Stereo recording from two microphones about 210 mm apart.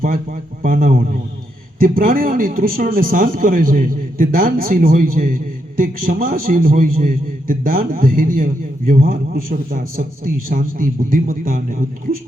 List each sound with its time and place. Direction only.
0.0 s a man's voice: 40° right (ahead or behind)